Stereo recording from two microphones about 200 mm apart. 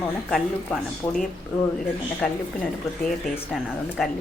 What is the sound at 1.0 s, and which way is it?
Speech, 15° left (ahead or behind).